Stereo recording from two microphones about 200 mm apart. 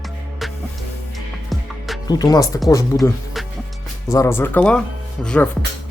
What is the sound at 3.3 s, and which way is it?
Music, centre (ahead or behind).